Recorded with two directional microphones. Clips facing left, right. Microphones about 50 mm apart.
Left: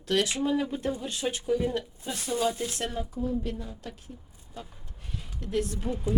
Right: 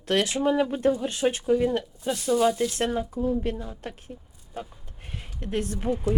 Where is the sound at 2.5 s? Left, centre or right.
Left.